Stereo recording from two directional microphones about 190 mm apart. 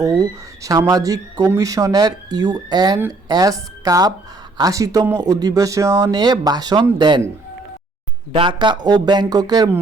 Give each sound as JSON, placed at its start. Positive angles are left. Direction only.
{"t": 0.0, "sound": "speech", "side_deg": -20}
{"t": 8.3, "sound": "speech", "side_deg": -25}